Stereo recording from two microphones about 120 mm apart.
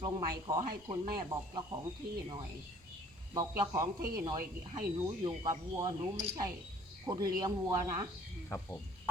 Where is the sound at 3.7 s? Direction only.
35° right (ahead or behind).